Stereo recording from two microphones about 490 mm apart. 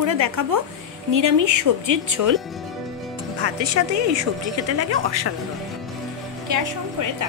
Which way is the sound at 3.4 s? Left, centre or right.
Right.